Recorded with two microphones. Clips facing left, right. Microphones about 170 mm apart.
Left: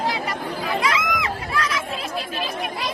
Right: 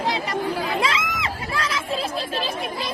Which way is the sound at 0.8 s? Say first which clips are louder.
Left 1 dB; 25° right (ahead or behind).